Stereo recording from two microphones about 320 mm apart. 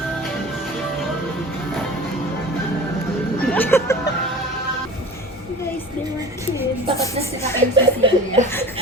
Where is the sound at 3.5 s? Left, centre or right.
Centre.